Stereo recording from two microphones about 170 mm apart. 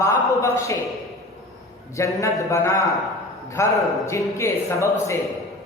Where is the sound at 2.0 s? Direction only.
15° left (ahead or behind).